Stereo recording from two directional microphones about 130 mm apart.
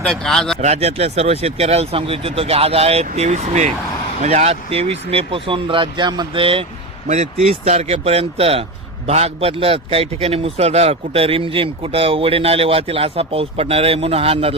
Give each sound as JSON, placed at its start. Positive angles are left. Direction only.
{"t": 0.0, "sound": "speech", "side_deg": 5}
{"t": 0.6, "sound": "a man's voice", "side_deg": -55}